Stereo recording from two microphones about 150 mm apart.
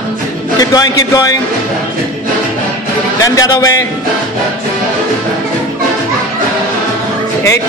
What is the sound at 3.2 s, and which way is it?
Speech, 25° left (ahead or behind).